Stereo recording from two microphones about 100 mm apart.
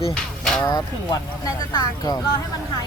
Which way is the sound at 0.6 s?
40° left (ahead or behind).